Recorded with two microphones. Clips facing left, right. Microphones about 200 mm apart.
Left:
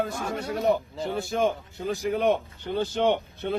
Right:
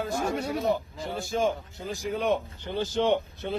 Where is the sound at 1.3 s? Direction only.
60° left (ahead or behind).